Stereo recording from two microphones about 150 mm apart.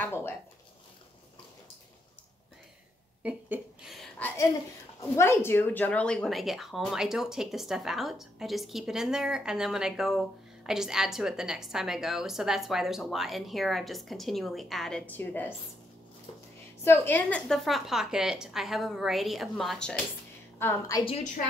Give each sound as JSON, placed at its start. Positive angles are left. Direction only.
{"t": 0.0, "sound": "speech", "side_deg": 15}
{"t": 3.2, "sound": "a sound", "side_deg": -10}
{"t": 5.1, "sound": "speech", "side_deg": 15}
{"t": 16.8, "sound": "speech", "side_deg": 15}
{"t": 20.5, "sound": "a woman's voice", "side_deg": 20}